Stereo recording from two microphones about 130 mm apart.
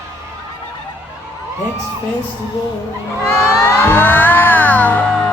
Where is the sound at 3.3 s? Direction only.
20° left (ahead or behind).